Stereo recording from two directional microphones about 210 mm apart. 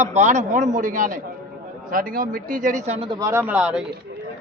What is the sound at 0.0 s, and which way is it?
Speech, 35° right (ahead or behind).